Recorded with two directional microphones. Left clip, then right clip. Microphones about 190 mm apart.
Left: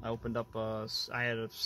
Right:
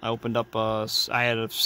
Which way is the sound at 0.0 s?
30° right (ahead or behind).